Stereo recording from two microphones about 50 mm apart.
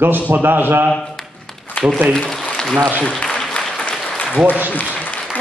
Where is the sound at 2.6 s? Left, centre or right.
Centre.